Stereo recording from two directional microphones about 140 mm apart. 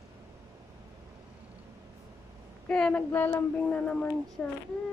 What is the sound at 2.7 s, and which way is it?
Child singing, 5° left (ahead or behind).